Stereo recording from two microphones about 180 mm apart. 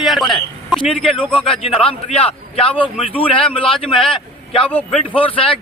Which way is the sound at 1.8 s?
35° left (ahead or behind).